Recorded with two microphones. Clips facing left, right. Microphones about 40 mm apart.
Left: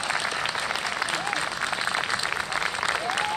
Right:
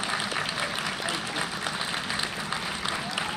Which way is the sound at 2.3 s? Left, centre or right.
Left.